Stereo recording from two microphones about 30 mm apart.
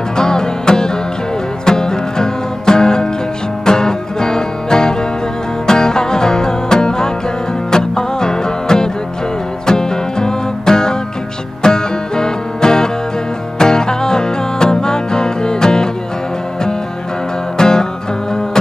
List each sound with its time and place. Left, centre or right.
0.2 s music: left
17.6 s music: left